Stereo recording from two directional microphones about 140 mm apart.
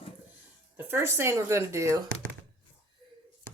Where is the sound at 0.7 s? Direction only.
15° right (ahead or behind).